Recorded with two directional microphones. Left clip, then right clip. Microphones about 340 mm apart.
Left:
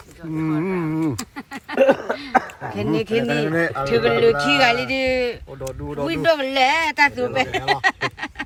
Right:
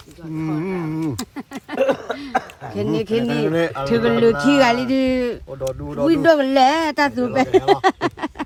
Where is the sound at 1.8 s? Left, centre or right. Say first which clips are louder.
Left 3 dB; left.